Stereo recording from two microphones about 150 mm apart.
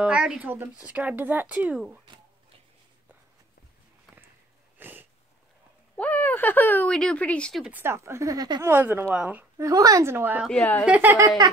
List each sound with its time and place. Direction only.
0.0 s speech: 5° right (ahead or behind)
4.7 s sneeze: 15° right (ahead or behind)
5.9 s speech: 10° left (ahead or behind)
7.6 s speech: 15° right (ahead or behind)
9.7 s speech: 20° right (ahead or behind)
10.5 s a woman's voice: 10° left (ahead or behind)
10.9 s speech: 10° right (ahead or behind)
11.2 s a sound: 30° right (ahead or behind)